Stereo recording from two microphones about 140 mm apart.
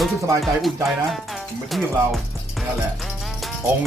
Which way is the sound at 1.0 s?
Centre (ahead or behind).